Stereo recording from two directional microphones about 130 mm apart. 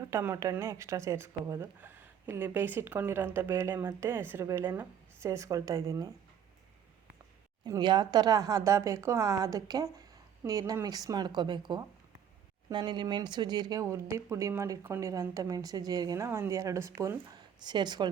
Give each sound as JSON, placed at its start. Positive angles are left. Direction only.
{"t": 0.0, "sound": "speech", "side_deg": -20}
{"t": 7.6, "sound": "speech", "side_deg": -35}
{"t": 13.8, "sound": "speech", "side_deg": -20}
{"t": 17.6, "sound": "speech", "side_deg": -35}